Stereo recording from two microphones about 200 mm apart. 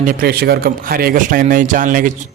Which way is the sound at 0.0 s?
45° right (ahead or behind).